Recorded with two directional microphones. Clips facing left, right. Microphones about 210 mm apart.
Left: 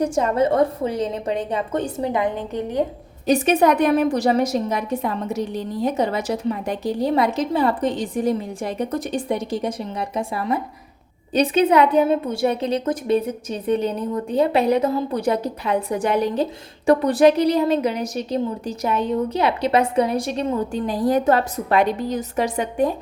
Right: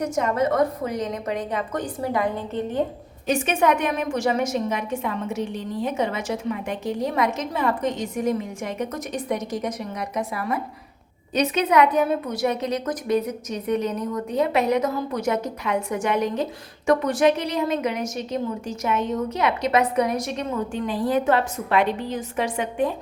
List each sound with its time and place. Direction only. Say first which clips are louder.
0.0 s a woman's voice: left 3 dB; 30° left (ahead or behind); by 2.8 s 15° left (ahead or behind)
3.2 s a woman's voice: left 4 dB; 35° left (ahead or behind)